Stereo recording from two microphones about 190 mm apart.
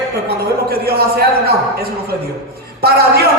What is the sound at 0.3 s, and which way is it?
A man's voice, 55° right (ahead or behind).